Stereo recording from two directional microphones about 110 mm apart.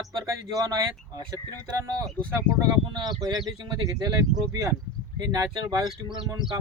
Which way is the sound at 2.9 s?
40° right (ahead or behind).